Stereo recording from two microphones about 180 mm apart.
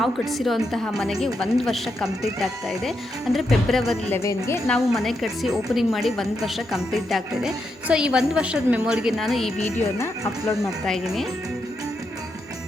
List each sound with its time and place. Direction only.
0.0 s a woman's voice: centre (ahead or behind)
4.1 s speech: 15° left (ahead or behind)
4.6 s a woman's voice: centre (ahead or behind)
9.6 s speech: 15° left (ahead or behind)
10.6 s a woman's voice: centre (ahead or behind)